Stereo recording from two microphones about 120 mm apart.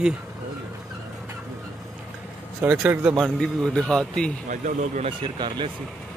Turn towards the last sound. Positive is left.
turn(degrees=-40)  # may be behind; listen again after turning